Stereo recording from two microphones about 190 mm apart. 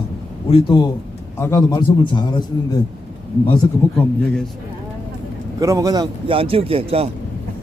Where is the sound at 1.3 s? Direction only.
15° left (ahead or behind).